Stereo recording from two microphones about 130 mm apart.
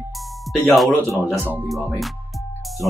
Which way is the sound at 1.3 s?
15° right (ahead or behind).